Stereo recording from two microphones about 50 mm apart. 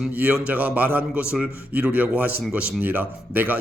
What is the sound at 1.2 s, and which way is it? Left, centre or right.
A man's voice, right.